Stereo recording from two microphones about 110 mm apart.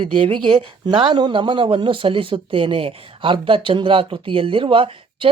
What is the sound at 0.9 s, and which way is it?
Speech, 45° right (ahead or behind).